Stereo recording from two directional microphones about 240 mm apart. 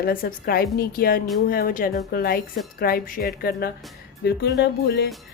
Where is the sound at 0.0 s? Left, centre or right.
Left.